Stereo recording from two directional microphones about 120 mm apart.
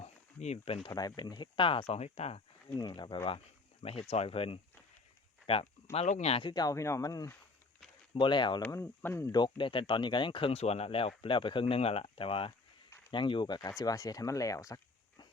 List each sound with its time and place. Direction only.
0.0 s a sound: 65° left (ahead or behind); by 0.9 s 50° left (ahead or behind)
1.1 s speech: 40° left (ahead or behind); by 2.4 s 60° left (ahead or behind)
2.7 s speech: 35° left (ahead or behind)
4.1 s speech: 55° left (ahead or behind)
6.4 s speech: 35° left (ahead or behind)
8.1 s speech: 40° left (ahead or behind)
8.7 s speech: 20° left (ahead or behind)
9.3 s speech: 40° left (ahead or behind)